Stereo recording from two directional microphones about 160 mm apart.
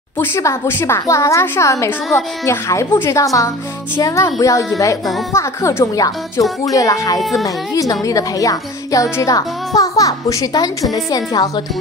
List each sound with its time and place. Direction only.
0.2 s speech: 15° left (ahead or behind)
7.2 s speech: centre (ahead or behind)
7.4 s speech: 20° left (ahead or behind)